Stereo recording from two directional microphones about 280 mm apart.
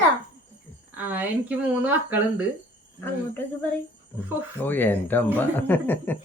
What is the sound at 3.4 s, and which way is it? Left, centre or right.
Speech, centre.